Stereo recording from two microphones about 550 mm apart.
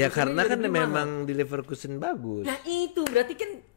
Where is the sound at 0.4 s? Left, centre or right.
Left.